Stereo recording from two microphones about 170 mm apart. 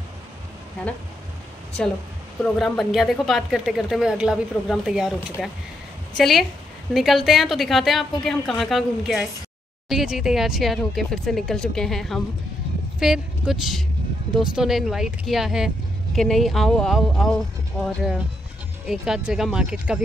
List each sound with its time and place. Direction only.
2.4 s speech: 5° left (ahead or behind)